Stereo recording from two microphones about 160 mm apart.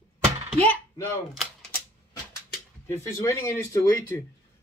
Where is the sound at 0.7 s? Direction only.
15° left (ahead or behind).